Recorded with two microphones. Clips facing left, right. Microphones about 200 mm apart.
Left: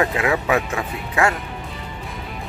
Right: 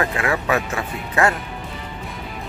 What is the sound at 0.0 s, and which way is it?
Speech, 15° left (ahead or behind).